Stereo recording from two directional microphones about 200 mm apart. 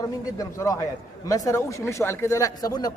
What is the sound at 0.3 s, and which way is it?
Speech, 15° left (ahead or behind).